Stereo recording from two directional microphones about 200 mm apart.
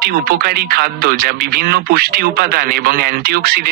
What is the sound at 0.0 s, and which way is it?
Speech, 50° right (ahead or behind).